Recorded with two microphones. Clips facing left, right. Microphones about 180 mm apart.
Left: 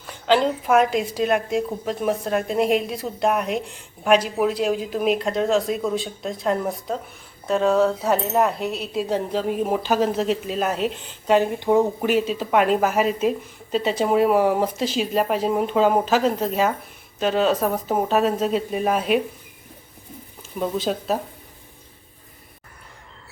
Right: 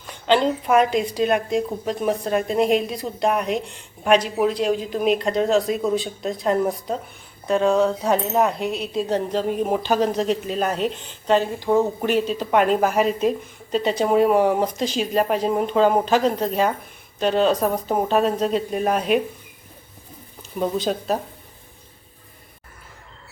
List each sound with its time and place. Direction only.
0.0 s a woman's voice: 5° left (ahead or behind)
11.9 s a woman's voice: 5° left (ahead or behind)
20.6 s a woman's voice: centre (ahead or behind)